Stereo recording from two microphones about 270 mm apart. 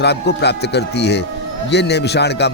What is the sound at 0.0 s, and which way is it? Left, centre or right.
A man's voice, left.